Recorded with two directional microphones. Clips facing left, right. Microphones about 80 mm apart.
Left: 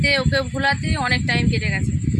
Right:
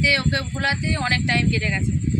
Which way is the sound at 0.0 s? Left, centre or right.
Left.